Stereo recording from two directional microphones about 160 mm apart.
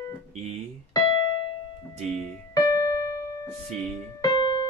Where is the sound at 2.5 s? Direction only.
20° left (ahead or behind).